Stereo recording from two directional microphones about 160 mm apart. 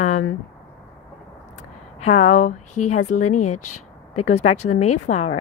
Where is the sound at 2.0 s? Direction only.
50° left (ahead or behind).